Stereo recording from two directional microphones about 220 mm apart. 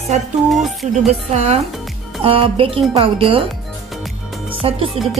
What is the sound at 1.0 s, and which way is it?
Speech, 30° right (ahead or behind).